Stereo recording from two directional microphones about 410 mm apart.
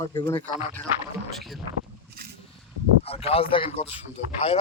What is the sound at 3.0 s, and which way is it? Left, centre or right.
Speech, centre.